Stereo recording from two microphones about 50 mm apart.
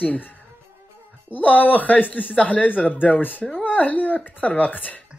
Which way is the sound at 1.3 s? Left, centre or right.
Left.